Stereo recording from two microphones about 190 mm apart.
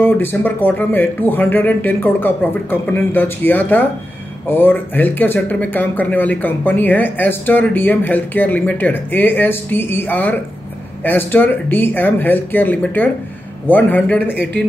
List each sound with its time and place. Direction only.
0.0 s speech: 10° left (ahead or behind)
14.3 s speech: 60° right (ahead or behind)